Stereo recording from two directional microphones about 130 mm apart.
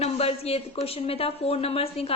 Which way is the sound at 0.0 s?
50° left (ahead or behind).